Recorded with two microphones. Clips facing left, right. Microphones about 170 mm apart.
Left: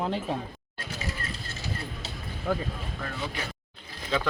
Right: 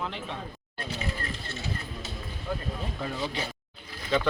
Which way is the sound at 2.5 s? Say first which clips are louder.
Left 5 dB; 85° left.